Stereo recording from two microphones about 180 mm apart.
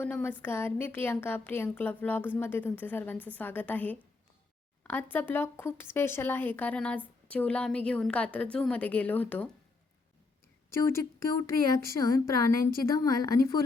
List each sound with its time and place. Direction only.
0.0 s speech: 10° left (ahead or behind)
10.7 s a woman's voice: 15° left (ahead or behind)